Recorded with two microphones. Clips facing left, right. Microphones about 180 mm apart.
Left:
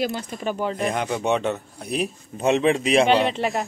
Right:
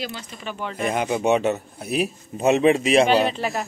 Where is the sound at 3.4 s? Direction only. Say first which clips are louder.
Left 2 dB; 25° left (ahead or behind).